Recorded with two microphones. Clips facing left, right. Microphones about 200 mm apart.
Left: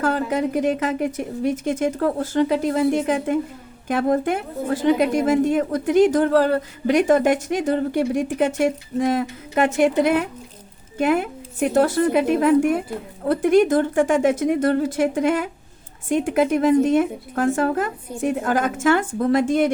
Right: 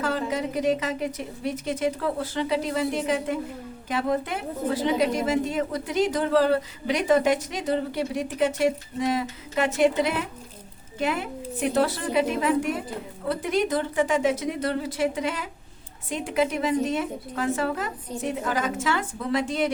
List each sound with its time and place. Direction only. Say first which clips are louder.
0.0 s a woman's voice: left 5 dB; 50° left (ahead or behind)